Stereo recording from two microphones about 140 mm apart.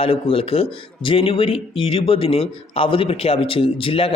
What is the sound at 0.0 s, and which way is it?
Speech, 40° left (ahead or behind).